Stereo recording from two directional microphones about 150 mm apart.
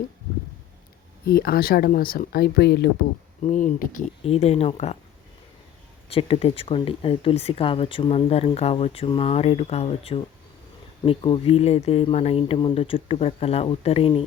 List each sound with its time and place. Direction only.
1.2 s speech: 90° left
3.4 s speech: 55° left (ahead or behind)
4.2 s speech: 45° left (ahead or behind)
6.1 s speech: 40° left (ahead or behind)